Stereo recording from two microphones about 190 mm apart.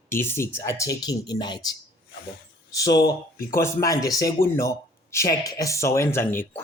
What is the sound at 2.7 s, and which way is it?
Speech, 20° left (ahead or behind).